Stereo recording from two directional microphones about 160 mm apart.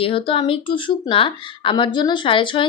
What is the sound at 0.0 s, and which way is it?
Speech, 35° left (ahead or behind).